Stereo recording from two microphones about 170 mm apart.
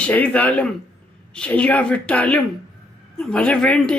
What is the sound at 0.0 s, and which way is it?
A woman's voice, 10° left (ahead or behind).